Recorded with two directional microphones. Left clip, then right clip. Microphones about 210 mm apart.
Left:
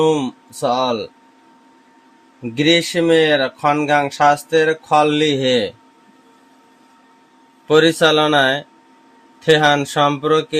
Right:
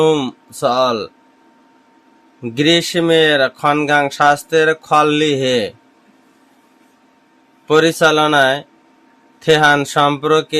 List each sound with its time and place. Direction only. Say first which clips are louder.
0.0 s speech: right 2 dB; 20° right (ahead or behind)
2.4 s speech: right 1 dB; 20° right (ahead or behind)
7.7 s speech: right 1 dB; 10° right (ahead or behind)